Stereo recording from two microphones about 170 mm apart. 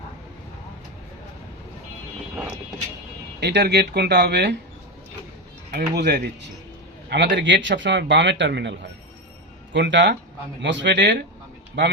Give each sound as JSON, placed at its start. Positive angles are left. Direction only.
{"t": 3.4, "sound": "speech", "side_deg": -80}
{"t": 5.7, "sound": "speech", "side_deg": -80}